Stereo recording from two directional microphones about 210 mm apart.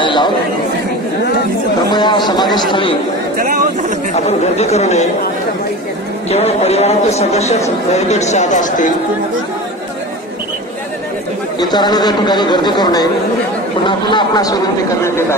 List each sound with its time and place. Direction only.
0.0 s a sound: 20° left (ahead or behind)
1.9 s chatter: 20° left (ahead or behind)
2.2 s a sound: 20° left (ahead or behind)
4.1 s speech: 30° left (ahead or behind)
6.3 s speech: 30° left (ahead or behind)
11.7 s speech: 20° left (ahead or behind)